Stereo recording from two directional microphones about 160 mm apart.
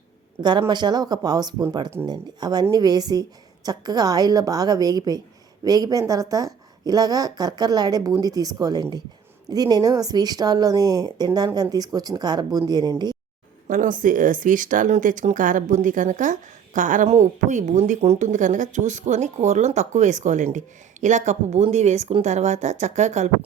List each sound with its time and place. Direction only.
0.7 s speech: 25° right (ahead or behind)
13.7 s speech: 55° right (ahead or behind)